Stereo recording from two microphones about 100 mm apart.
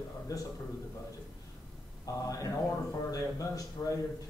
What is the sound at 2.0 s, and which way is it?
Speech, 35° left (ahead or behind).